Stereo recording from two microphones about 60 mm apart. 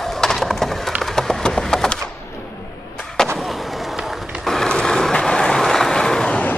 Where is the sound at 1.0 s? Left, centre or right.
Centre.